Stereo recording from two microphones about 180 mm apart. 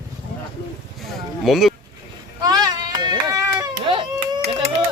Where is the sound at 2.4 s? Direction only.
20° right (ahead or behind).